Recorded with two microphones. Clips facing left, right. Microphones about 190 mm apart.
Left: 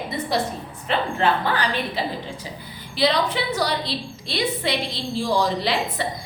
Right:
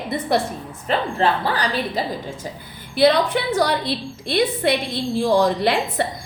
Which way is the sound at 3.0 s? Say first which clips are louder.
Right 5 dB; 55° right (ahead or behind).